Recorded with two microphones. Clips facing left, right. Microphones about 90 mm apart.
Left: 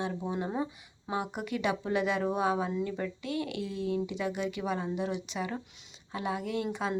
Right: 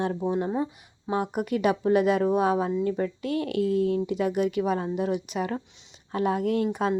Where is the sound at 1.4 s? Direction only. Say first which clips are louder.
Right 9 dB; 35° right (ahead or behind).